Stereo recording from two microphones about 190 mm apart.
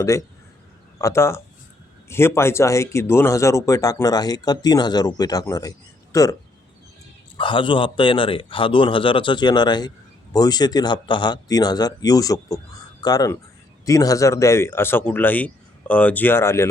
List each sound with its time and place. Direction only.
0.0 s speech: 15° left (ahead or behind)
7.3 s a man's voice: 25° left (ahead or behind)